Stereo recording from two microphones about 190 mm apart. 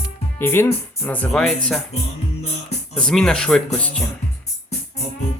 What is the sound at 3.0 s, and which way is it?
Speech, 5° left (ahead or behind).